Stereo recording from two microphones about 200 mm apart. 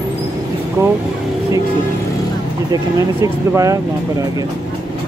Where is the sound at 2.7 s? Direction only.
15° right (ahead or behind).